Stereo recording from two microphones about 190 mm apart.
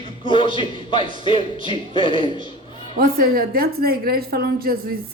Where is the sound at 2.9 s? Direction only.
50° right (ahead or behind).